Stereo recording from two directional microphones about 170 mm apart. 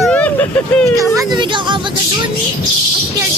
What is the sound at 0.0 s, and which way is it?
Vehicle, 5° left (ahead or behind).